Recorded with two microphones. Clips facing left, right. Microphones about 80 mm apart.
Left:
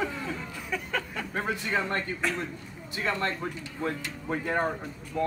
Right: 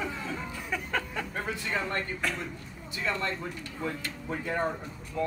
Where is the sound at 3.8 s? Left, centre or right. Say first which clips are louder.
Left 3 dB; left.